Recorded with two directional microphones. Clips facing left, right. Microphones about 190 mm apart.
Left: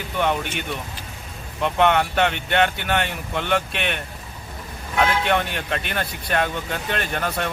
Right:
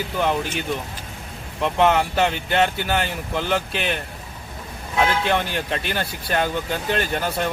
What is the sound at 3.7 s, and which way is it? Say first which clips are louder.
Speech: right 2 dB; 30° right (ahead or behind).